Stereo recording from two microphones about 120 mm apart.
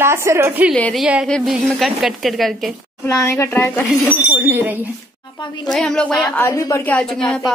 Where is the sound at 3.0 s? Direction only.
25° left (ahead or behind).